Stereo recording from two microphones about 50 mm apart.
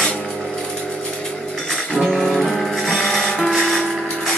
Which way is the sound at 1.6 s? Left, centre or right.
Centre.